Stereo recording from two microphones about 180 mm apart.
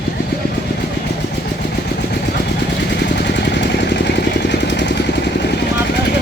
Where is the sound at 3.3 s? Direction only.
75° left (ahead or behind).